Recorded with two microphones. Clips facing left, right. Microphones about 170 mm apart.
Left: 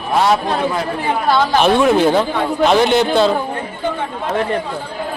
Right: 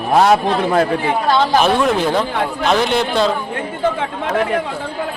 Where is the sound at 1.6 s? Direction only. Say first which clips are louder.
Left 3 dB; centre (ahead or behind).